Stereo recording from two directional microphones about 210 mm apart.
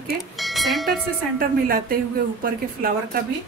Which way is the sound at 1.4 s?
45° right (ahead or behind).